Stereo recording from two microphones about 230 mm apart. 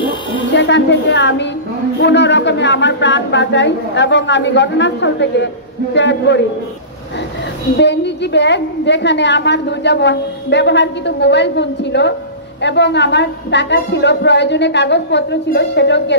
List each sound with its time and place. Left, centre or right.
0.5 s a woman's voice: left
7.7 s a woman's voice: left